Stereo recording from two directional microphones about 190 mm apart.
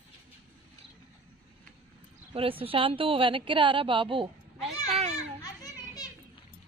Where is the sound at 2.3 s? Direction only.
30° right (ahead or behind).